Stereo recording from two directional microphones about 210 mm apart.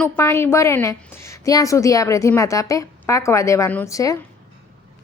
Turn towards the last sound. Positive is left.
turn(degrees=15)  # may be behind; listen again after turning